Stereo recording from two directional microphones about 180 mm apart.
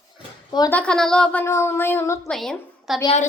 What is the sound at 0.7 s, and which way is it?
Speech, 5° left (ahead or behind).